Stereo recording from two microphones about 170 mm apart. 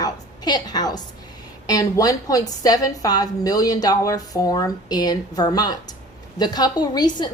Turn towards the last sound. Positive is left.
turn(degrees=25)  # may be behind; listen again after turning